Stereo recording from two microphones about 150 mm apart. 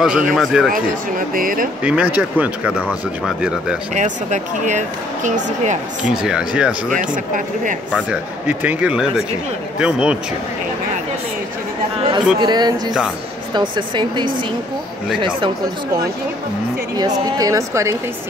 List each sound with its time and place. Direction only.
0.0 s speech: centre (ahead or behind)
1.3 s speech: 65° right (ahead or behind)
1.8 s speech: 10° right (ahead or behind)
3.9 s speech: 55° right (ahead or behind)
6.0 s speech: 5° right (ahead or behind)
8.1 s speech: 10° right (ahead or behind)
12.4 s speech: 30° right (ahead or behind)
17.0 s speech: 25° right (ahead or behind)